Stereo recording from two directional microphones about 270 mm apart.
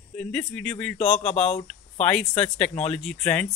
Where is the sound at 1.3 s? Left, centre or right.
Left.